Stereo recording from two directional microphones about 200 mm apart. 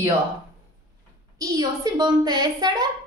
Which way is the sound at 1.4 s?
20° right (ahead or behind).